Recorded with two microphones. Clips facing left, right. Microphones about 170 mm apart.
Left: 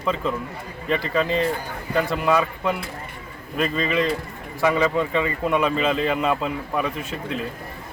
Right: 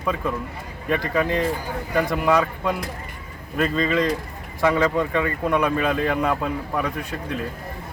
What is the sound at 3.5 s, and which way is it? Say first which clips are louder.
Speech: right 1 dB; 15° left (ahead or behind).